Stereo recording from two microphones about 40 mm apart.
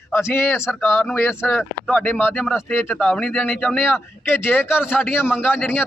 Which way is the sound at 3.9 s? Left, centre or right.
Left.